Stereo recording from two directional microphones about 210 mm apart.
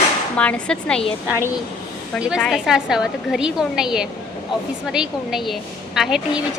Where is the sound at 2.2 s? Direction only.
5° right (ahead or behind).